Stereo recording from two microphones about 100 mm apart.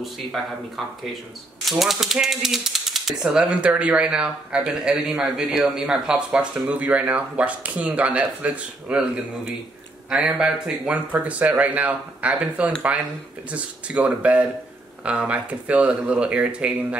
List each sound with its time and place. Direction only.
0.0 s speech: centre (ahead or behind)
1.7 s speech: centre (ahead or behind)